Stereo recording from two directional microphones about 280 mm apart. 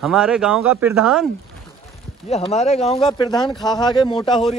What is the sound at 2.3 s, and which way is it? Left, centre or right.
Speech, left.